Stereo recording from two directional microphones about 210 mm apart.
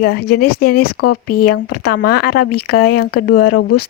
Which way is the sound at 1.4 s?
45° left (ahead or behind).